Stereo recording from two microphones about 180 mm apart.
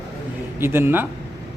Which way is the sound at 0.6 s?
10° right (ahead or behind).